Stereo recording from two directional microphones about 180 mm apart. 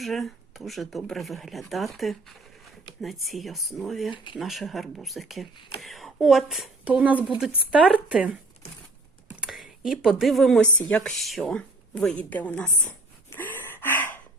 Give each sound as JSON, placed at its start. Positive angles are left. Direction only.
{"t": 0.0, "sound": "speech", "side_deg": 0}
{"t": 5.5, "sound": "speech", "side_deg": 25}
{"t": 5.8, "sound": "speech", "side_deg": 0}
{"t": 9.3, "sound": "a sound", "side_deg": 0}
{"t": 10.8, "sound": "a woman's voice", "side_deg": 5}
{"t": 13.3, "sound": "gasp", "side_deg": 10}